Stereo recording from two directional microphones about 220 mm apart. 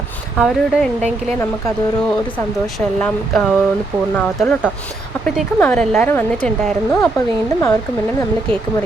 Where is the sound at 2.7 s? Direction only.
Centre (ahead or behind).